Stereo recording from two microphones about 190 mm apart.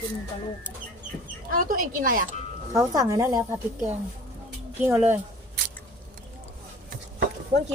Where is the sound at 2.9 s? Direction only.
15° right (ahead or behind).